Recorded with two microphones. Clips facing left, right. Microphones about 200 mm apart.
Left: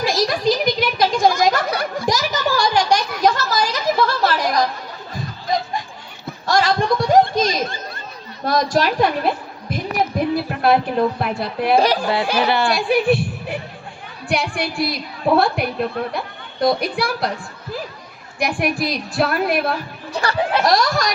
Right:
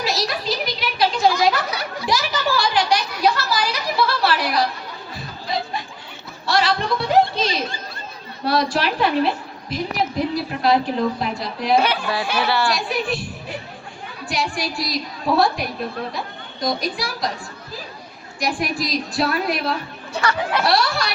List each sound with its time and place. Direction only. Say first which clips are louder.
0.0 s a sound: left 6 dB; 50° left (ahead or behind)
5.1 s snicker: left 4 dB; 45° left (ahead or behind)
6.4 s a sound: left 3 dB; 45° left (ahead or behind)
8.4 s a woman's voice: left 2 dB; 45° left (ahead or behind)
11.8 s speech: left 4 dB; 35° left (ahead or behind)
12.4 s speech: left 1 dB; 20° left (ahead or behind)
12.7 s a woman's voice: left 7 dB; 60° left (ahead or behind)
18.3 s a woman's voice: left 3 dB; 60° left (ahead or behind)
20.1 s speech: left 2 dB; 35° left (ahead or behind)